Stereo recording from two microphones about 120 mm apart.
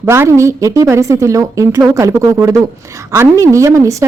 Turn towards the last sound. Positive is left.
turn(degrees=-25)  # may be behind; listen again after turning